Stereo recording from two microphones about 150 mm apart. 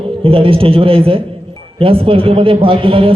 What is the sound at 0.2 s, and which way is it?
A man's voice, 35° right (ahead or behind).